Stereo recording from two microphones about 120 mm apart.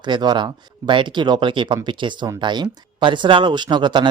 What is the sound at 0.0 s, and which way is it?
Speech, 40° right (ahead or behind).